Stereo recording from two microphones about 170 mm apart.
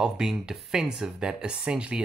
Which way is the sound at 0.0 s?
5° right (ahead or behind).